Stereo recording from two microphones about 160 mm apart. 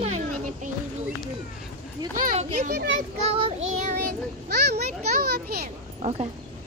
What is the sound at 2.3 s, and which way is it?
Speech, 45° right (ahead or behind).